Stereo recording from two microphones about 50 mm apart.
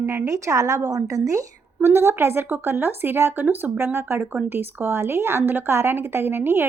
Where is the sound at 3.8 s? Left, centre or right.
Right.